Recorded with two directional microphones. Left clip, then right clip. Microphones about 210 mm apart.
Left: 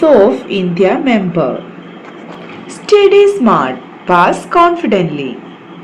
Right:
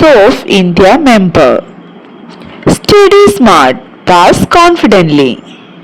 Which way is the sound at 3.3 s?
45° right (ahead or behind).